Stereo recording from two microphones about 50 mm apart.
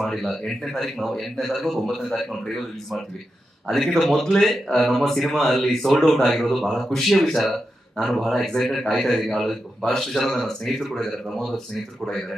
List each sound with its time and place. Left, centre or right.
0.0 s a man's voice: centre